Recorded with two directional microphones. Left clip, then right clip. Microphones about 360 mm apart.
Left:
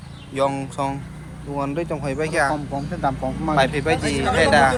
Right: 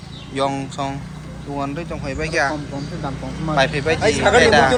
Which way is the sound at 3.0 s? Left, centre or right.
Left.